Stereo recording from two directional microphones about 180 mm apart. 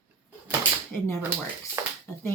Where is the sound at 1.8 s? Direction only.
15° right (ahead or behind).